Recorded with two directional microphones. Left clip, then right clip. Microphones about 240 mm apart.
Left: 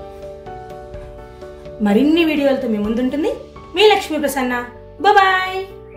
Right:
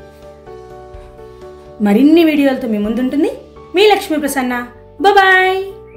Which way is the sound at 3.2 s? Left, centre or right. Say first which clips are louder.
Right 1 dB; right.